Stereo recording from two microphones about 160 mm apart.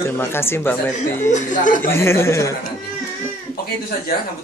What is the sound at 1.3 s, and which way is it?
Speech, 50° left (ahead or behind).